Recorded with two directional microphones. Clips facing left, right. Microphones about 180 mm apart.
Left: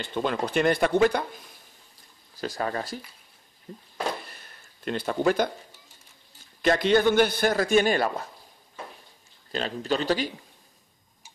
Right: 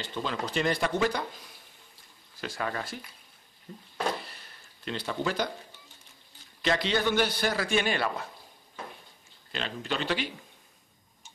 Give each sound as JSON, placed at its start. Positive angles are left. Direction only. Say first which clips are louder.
{"t": 0.0, "sound": "speech", "louder": "left 6 dB", "side_deg": 55}
{"t": 2.3, "sound": "speech", "louder": "left 4 dB", "side_deg": 40}
{"t": 4.3, "sound": "a sound", "louder": "left 2 dB", "side_deg": 50}
{"t": 6.6, "sound": "a man's voice", "louder": "left 7 dB", "side_deg": 50}
{"t": 9.5, "sound": "speech", "louder": "left 6 dB", "side_deg": 40}